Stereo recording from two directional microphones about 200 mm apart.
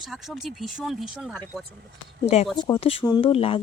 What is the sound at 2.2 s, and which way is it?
Speech, 30° left (ahead or behind).